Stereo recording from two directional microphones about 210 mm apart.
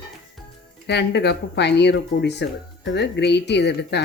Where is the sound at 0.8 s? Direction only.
50° left (ahead or behind).